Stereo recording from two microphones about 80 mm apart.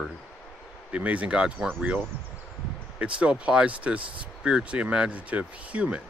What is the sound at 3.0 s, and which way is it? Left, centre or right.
Speech, centre.